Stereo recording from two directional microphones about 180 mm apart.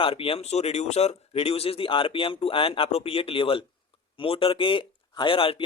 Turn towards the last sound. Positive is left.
turn(degrees=30)  # may be behind; listen again after turning